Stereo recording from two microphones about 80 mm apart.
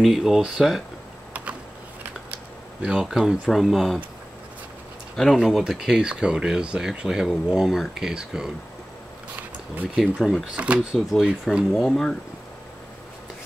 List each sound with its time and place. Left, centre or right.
0.0 s speech: centre
1.3 s a sound: centre
3.4 s speech: centre
5.1 s speech: centre
9.9 s speech: centre
10.5 s speech: centre